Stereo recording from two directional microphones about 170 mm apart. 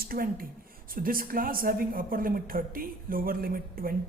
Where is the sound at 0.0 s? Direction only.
60° right (ahead or behind).